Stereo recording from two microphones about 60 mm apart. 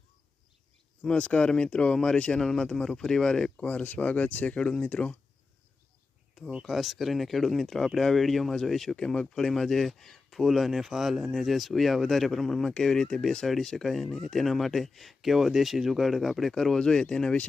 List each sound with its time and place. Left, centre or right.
1.0 s speech: centre
6.6 s speech: centre